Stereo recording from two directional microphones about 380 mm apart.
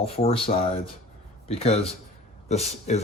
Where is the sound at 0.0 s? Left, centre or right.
Centre.